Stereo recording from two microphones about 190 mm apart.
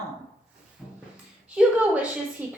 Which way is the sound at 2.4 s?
10° right (ahead or behind).